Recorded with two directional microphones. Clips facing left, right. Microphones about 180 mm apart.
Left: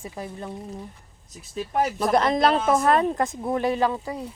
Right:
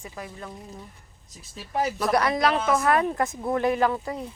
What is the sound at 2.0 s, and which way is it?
Speech, 25° left (ahead or behind).